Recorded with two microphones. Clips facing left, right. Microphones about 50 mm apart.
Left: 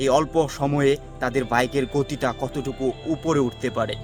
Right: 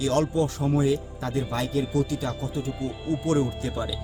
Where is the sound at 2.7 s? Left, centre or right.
Centre.